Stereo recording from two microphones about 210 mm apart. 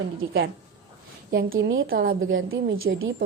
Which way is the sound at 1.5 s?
65° right (ahead or behind).